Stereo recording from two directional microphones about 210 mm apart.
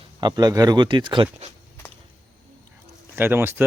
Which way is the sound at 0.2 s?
20° right (ahead or behind).